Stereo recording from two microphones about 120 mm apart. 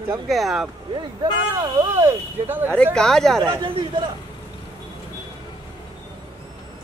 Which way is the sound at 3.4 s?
35° right (ahead or behind).